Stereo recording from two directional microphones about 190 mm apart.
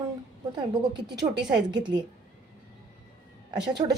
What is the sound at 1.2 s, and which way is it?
Speech, 20° right (ahead or behind).